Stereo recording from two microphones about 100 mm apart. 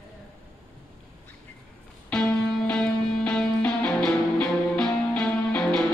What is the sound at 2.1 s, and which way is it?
Music, 10° left (ahead or behind).